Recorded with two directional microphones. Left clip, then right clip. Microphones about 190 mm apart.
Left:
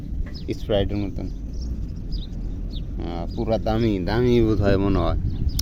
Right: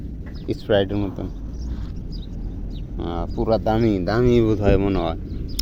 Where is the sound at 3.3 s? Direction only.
5° left (ahead or behind).